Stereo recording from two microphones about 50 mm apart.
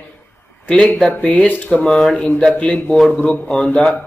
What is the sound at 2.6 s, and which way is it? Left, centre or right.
Speech, left.